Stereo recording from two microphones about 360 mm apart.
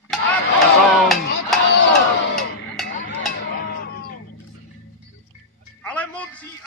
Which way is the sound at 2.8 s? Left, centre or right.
Left.